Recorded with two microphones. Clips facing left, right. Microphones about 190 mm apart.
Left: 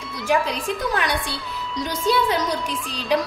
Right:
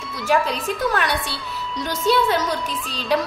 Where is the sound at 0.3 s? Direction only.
15° left (ahead or behind).